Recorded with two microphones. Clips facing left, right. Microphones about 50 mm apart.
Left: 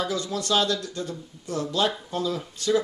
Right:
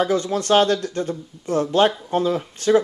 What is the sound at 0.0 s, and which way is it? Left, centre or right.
Speech, right.